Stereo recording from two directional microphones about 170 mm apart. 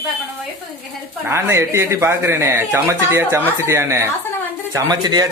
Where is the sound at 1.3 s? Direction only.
15° right (ahead or behind).